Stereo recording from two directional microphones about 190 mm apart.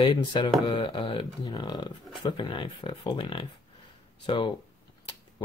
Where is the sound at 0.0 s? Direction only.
25° left (ahead or behind).